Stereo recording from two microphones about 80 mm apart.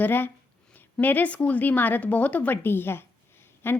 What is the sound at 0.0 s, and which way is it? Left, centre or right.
A woman's voice, left.